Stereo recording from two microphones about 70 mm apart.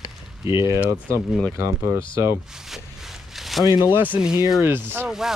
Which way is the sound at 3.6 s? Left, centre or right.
Left.